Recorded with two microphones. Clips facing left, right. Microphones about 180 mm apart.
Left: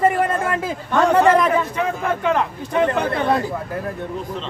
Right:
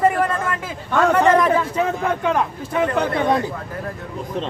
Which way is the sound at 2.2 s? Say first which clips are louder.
Even; 10° right (ahead or behind).